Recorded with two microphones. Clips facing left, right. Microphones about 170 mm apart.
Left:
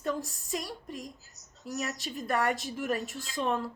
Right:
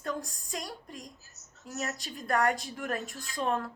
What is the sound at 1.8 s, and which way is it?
Speech, 40° right (ahead or behind).